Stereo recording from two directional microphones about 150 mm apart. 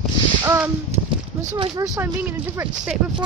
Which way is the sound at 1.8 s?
20° right (ahead or behind).